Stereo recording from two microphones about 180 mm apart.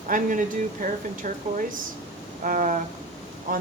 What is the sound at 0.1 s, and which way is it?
Speech, 45° right (ahead or behind).